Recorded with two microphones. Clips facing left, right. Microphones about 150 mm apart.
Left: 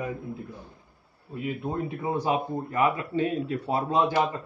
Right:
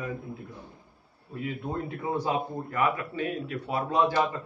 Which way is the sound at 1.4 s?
15° left (ahead or behind).